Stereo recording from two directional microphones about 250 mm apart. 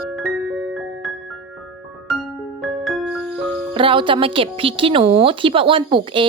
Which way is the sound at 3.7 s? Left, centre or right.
Right.